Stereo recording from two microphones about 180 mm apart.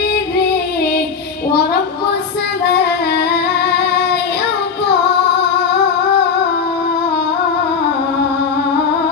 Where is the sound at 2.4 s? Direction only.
65° left (ahead or behind).